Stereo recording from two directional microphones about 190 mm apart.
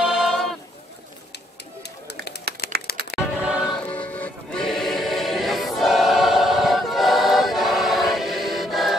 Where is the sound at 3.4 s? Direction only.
5° right (ahead or behind).